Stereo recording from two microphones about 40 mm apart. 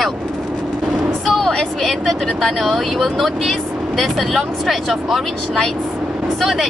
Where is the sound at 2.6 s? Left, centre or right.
Centre.